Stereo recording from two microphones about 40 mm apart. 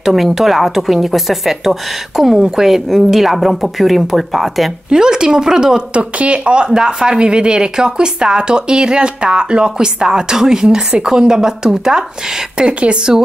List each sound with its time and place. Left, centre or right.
0.0 s a woman's voice: centre
4.8 s a woman's voice: centre
5.9 s a woman's voice: right